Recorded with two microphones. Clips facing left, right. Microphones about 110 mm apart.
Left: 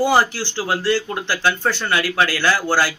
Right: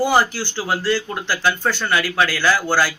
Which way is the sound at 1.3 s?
25° left (ahead or behind).